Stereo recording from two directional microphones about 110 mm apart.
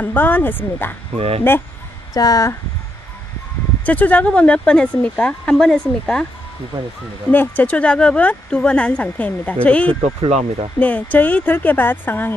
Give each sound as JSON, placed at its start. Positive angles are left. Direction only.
{"t": 0.0, "sound": "speech", "side_deg": 15}
{"t": 1.1, "sound": "speech", "side_deg": -70}
{"t": 2.1, "sound": "speech", "side_deg": 35}
{"t": 3.8, "sound": "speech", "side_deg": 15}
{"t": 7.2, "sound": "speech", "side_deg": 15}
{"t": 10.2, "sound": "speech", "side_deg": -75}
{"t": 10.8, "sound": "speech", "side_deg": 15}